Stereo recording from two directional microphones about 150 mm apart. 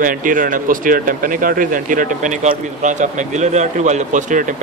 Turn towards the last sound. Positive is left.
turn(degrees=-55)  # may be behind; listen again after turning